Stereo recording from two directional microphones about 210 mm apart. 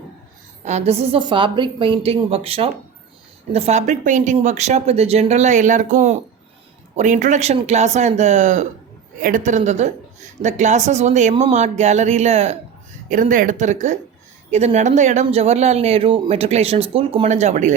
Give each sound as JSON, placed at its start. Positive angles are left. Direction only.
{"t": 0.6, "sound": "a woman's voice", "side_deg": -30}